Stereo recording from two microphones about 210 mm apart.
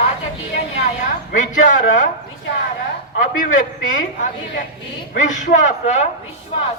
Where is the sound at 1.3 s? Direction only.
35° left (ahead or behind).